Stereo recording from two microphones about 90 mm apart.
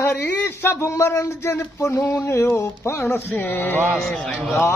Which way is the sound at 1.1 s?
30° left (ahead or behind).